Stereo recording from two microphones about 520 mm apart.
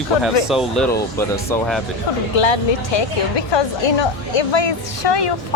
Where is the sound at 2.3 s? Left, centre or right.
Left.